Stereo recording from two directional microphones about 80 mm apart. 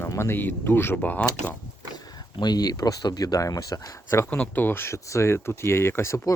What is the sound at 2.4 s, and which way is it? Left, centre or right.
Speech, left.